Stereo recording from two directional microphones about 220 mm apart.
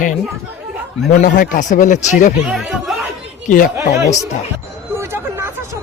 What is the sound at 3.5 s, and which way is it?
Speech, 40° left (ahead or behind).